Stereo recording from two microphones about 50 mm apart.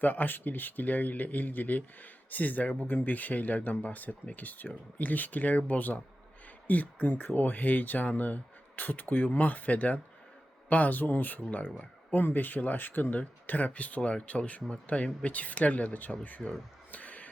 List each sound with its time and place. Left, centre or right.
0.0 s speech: left
16.9 s music: left